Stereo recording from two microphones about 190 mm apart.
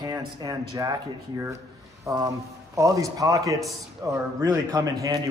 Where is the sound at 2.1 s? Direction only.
15° right (ahead or behind).